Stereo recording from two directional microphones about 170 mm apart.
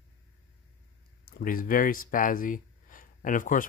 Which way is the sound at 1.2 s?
60° left (ahead or behind).